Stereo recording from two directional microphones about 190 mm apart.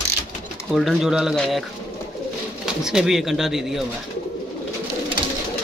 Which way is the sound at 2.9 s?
Centre (ahead or behind).